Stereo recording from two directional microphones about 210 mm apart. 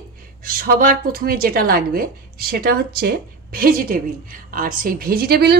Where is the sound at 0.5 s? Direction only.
45° right (ahead or behind).